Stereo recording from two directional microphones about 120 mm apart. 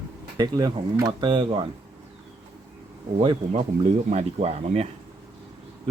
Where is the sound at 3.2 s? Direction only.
45° right (ahead or behind).